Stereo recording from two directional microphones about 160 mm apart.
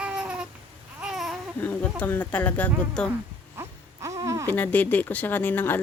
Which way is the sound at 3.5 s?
20° right (ahead or behind).